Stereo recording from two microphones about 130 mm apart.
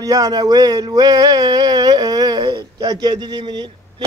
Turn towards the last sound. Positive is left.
turn(degrees=-35)  # may be behind; listen again after turning